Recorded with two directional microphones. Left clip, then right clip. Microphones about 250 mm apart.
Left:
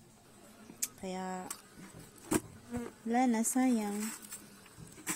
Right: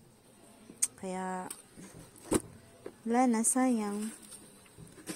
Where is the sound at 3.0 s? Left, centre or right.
Centre.